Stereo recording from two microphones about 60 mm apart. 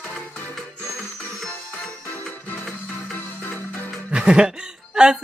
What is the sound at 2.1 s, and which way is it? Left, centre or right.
Music, left.